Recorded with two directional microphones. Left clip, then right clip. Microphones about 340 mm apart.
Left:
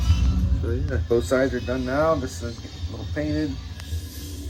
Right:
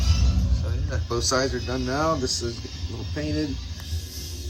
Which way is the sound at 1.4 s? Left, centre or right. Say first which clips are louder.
Left 2 dB; centre.